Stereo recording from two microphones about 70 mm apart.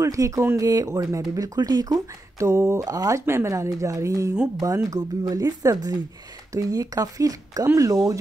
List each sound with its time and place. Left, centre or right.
0.0 s speech: right
2.3 s speech: right
2.8 s speech: right
3.3 s speech: right